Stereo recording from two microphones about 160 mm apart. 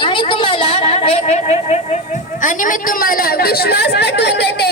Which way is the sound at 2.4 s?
55° left (ahead or behind).